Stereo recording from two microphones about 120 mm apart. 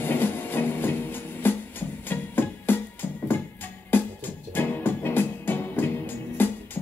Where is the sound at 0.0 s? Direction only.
15° left (ahead or behind).